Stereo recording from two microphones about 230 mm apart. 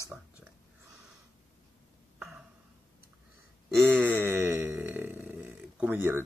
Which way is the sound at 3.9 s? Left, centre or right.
Centre.